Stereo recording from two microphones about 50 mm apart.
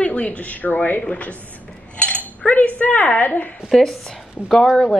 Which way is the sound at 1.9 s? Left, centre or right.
Left.